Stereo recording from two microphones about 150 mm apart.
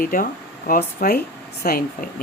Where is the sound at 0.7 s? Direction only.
90° left.